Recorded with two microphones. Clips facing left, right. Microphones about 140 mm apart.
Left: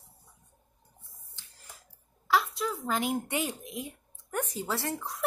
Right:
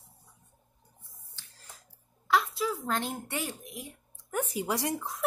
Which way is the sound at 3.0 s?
15° left (ahead or behind).